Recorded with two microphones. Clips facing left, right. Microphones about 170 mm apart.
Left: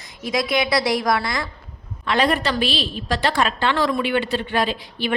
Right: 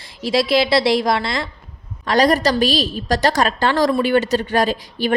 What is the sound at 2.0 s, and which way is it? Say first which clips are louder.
A woman's voice: right 5 dB; 40° right (ahead or behind).